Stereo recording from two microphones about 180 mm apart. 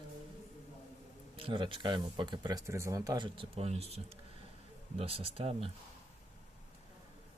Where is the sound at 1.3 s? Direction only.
30° right (ahead or behind).